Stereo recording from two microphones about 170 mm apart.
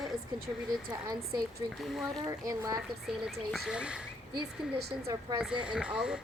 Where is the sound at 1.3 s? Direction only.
60° right (ahead or behind).